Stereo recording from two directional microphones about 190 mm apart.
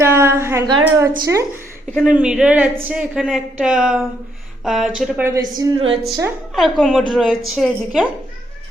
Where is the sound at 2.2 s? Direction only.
5° right (ahead or behind).